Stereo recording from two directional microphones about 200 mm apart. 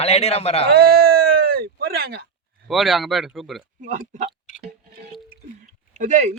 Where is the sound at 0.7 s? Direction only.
50° right (ahead or behind).